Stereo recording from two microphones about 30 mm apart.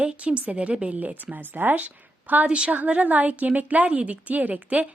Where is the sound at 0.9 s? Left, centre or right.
Right.